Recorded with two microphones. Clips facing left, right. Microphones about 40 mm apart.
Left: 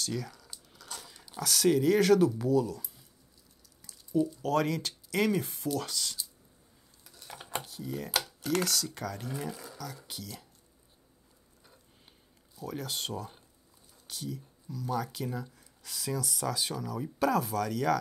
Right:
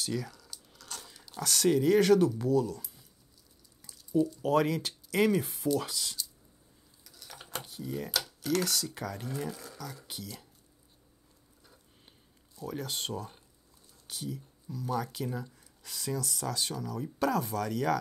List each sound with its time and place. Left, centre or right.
0.0 s speech: centre
0.5 s biting: centre
1.0 s speech: centre
3.8 s drip: centre
4.4 s speech: centre
7.1 s a sound: left
7.3 s computer keyboard: centre
7.6 s speech: centre
12.5 s speech: centre